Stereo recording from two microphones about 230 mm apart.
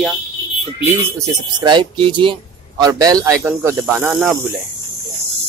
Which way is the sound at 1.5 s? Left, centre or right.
Centre.